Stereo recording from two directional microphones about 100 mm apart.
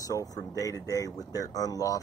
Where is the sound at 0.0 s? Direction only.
35° left (ahead or behind).